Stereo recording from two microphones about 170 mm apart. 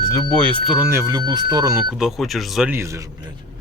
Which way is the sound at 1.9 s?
Centre (ahead or behind).